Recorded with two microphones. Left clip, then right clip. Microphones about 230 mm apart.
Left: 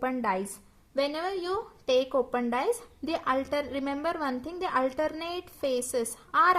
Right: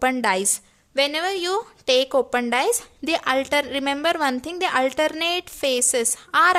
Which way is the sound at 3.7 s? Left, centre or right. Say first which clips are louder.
Right 9 dB; right.